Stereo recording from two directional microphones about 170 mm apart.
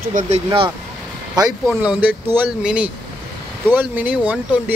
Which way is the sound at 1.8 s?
10° right (ahead or behind).